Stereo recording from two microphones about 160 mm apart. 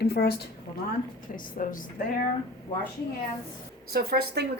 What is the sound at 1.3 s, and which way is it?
Speech, 55° left (ahead or behind).